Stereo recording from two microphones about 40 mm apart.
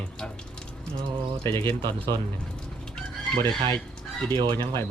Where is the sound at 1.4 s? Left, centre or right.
Left.